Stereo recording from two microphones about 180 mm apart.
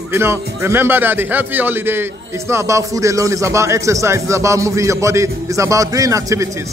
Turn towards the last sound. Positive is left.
turn(degrees=-15)  # may be behind; listen again after turning